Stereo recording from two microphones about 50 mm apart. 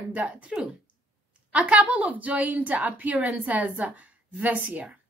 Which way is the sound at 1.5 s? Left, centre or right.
Right.